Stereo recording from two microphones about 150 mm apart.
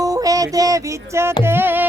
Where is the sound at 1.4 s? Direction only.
15° right (ahead or behind).